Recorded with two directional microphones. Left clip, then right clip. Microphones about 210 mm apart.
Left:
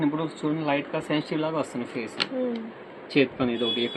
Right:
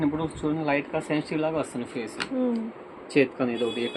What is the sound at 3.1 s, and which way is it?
Speech, 15° left (ahead or behind).